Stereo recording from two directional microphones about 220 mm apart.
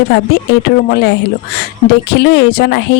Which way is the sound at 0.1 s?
50° left (ahead or behind).